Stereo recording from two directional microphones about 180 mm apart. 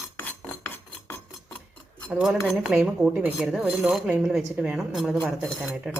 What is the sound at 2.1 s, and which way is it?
Speech, centre (ahead or behind).